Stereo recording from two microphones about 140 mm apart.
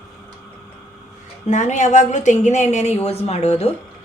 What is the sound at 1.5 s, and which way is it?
A woman's voice, 60° left (ahead or behind).